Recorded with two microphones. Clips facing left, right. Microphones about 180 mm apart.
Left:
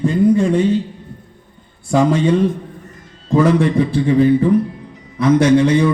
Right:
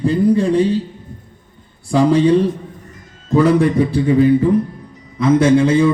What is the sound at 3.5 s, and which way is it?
Speech, 45° right (ahead or behind).